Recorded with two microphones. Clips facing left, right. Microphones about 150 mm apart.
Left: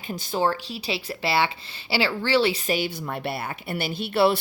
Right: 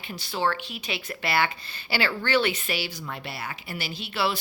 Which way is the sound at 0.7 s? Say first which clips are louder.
Left 4 dB; 30° left (ahead or behind).